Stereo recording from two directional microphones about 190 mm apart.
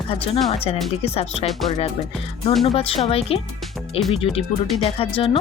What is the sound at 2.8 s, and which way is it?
Speech, 30° left (ahead or behind).